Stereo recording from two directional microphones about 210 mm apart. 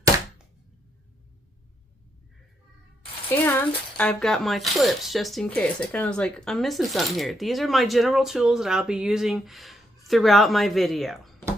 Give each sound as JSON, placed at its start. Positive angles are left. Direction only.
{"t": 3.2, "sound": "speech", "side_deg": 10}